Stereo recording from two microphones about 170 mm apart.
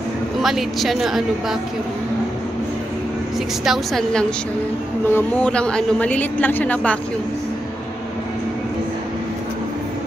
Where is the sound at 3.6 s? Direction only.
Centre (ahead or behind).